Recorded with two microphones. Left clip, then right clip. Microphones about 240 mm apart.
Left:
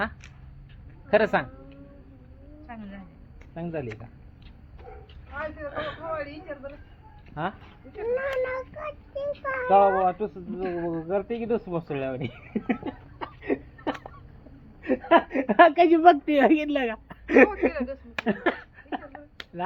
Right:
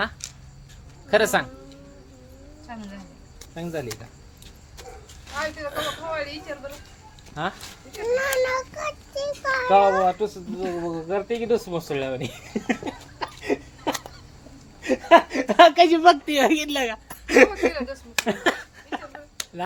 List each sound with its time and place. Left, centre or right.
1.1 s speech: centre
2.7 s a sound: right
3.5 s speech: centre
5.3 s speech: centre
7.4 s speech: centre
7.9 s speech: centre
10.6 s speech: centre
11.1 s speech: centre
14.8 s a sound: centre
15.3 s a woman's voice: centre
18.3 s a sound: centre